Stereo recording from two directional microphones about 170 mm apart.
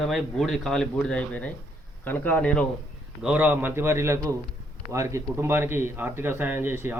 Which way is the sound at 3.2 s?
10° right (ahead or behind).